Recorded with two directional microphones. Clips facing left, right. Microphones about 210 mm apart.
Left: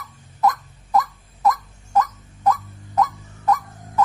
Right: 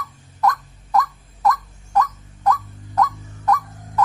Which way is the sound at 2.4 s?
20° left (ahead or behind).